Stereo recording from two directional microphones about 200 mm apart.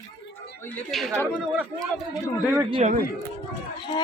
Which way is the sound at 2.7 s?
35° right (ahead or behind).